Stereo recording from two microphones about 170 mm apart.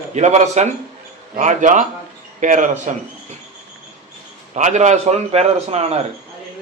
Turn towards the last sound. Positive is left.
turn(degrees=-40)  # may be behind; listen again after turning